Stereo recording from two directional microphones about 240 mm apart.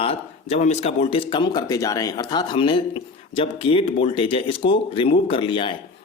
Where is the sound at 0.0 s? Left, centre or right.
Left.